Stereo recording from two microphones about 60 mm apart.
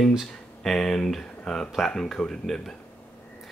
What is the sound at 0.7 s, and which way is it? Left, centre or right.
Speech, centre.